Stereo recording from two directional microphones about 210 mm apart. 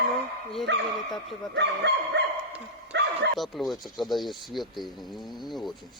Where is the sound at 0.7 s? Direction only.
55° right (ahead or behind).